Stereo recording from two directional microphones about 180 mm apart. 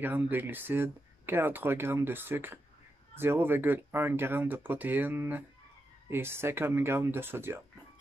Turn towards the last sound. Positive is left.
turn(degrees=-10)  # may be behind; listen again after turning